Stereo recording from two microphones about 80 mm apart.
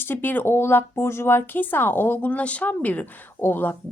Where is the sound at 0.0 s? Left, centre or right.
Left.